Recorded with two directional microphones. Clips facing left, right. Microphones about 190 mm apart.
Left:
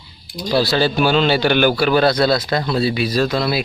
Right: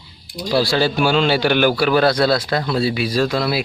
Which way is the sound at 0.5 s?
10° right (ahead or behind).